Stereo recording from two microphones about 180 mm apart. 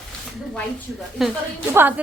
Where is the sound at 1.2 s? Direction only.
Centre (ahead or behind).